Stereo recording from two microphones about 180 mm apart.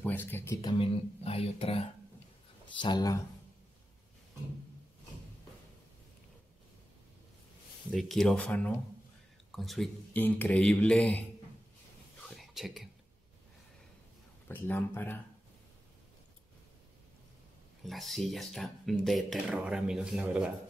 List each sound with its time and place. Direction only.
0.0 s speech: 10° left (ahead or behind)
0.7 s speech: 30° left (ahead or behind)
7.9 s speech: centre (ahead or behind)
12.2 s whispering: centre (ahead or behind)
14.5 s speech: 10° left (ahead or behind)
17.8 s speech: centre (ahead or behind)